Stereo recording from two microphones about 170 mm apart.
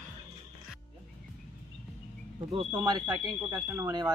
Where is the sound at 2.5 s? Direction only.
20° right (ahead or behind).